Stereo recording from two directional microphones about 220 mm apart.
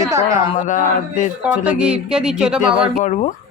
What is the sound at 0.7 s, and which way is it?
Speech, 35° left (ahead or behind).